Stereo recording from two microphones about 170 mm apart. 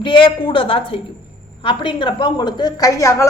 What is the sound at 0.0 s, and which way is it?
A woman's voice, 30° left (ahead or behind).